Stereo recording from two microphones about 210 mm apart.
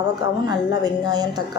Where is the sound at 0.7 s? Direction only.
20° right (ahead or behind).